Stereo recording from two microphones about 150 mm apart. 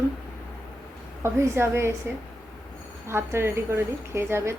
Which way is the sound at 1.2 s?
15° right (ahead or behind).